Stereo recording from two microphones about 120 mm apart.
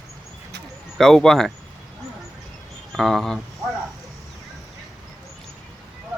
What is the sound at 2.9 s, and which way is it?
Speech, centre (ahead or behind).